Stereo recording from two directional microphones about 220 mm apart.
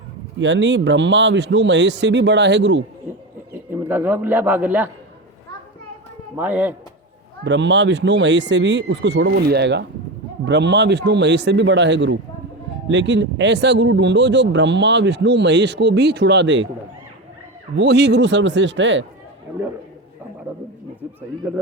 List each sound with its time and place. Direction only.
0.3 s speech: 55° right (ahead or behind)
3.7 s a man's voice: 10° right (ahead or behind)
6.3 s speech: 10° right (ahead or behind)
7.4 s speech: 55° right (ahead or behind)
17.7 s speech: 50° right (ahead or behind)